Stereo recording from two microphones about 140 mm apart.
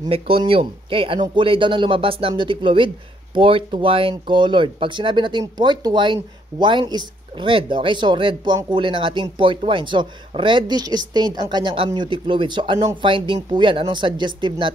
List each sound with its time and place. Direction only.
0.1 s a woman's voice: 40° right (ahead or behind)